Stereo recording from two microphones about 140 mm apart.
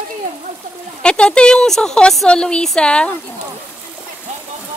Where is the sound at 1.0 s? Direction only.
5° left (ahead or behind).